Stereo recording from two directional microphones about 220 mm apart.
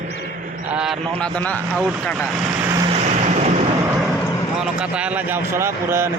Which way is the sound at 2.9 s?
30° right (ahead or behind).